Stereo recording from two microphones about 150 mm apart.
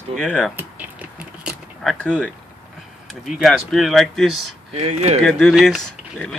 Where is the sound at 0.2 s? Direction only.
5° left (ahead or behind).